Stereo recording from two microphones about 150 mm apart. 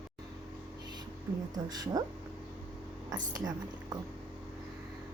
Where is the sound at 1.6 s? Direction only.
25° right (ahead or behind).